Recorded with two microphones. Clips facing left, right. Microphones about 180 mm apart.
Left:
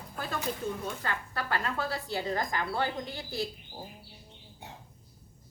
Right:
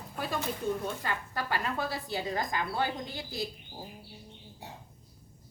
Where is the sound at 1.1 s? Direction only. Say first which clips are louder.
Even; 15° right (ahead or behind).